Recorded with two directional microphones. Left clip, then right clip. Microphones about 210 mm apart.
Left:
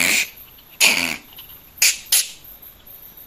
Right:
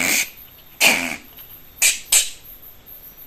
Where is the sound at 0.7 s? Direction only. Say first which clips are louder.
Even; 15° left (ahead or behind).